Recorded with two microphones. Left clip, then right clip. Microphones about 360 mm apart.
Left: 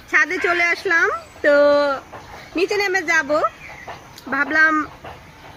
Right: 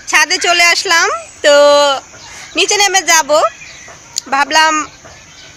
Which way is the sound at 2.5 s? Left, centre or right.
Right.